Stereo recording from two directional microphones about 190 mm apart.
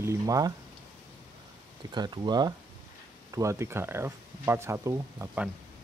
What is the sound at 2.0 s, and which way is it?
Speech, 20° right (ahead or behind).